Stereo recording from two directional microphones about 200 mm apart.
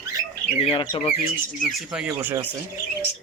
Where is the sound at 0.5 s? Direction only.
30° left (ahead or behind).